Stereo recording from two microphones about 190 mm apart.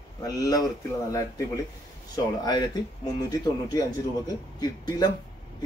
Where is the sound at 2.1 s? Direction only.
20° left (ahead or behind).